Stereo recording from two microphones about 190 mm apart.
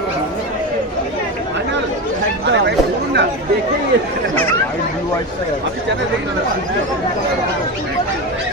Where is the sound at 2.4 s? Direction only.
65° right (ahead or behind).